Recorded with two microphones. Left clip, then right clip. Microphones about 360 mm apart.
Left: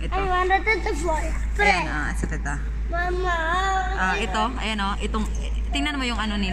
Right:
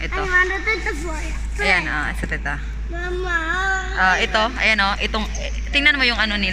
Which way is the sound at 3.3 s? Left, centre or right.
Left.